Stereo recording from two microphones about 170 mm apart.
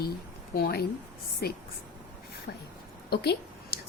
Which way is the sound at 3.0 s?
75° left (ahead or behind).